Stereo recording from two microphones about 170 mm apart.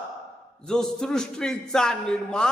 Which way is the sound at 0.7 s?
5° left (ahead or behind).